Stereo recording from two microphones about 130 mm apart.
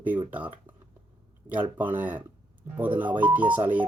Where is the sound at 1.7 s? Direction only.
15° right (ahead or behind).